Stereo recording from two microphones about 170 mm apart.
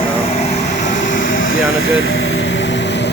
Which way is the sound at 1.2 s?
90° left.